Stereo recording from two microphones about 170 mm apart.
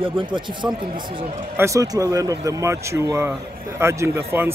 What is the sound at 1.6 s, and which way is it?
A man's voice, 20° right (ahead or behind).